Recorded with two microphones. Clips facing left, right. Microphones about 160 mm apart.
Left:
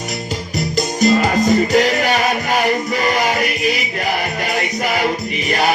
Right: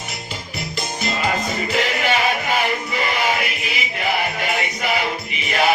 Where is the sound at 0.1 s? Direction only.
40° left (ahead or behind).